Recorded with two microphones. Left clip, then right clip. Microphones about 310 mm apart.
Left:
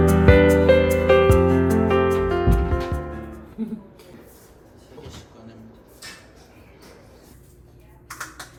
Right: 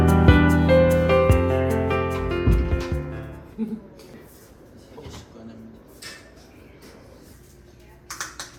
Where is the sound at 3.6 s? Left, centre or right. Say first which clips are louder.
Right 1 dB; right.